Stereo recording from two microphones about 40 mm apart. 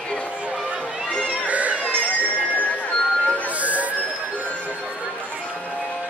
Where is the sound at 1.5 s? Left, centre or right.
Right.